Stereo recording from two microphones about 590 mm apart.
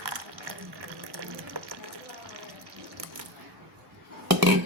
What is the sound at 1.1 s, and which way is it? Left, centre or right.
Water, right.